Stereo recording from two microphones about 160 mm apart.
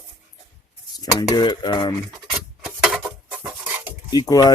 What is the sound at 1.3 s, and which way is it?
Stir, 25° left (ahead or behind).